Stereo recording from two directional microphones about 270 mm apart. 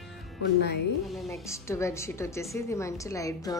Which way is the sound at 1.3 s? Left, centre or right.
Centre.